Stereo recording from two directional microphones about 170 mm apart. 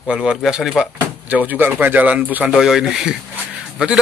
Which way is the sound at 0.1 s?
5° right (ahead or behind).